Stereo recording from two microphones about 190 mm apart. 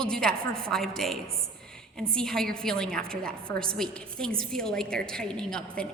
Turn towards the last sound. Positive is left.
turn(degrees=5)  # may be behind; listen again after turning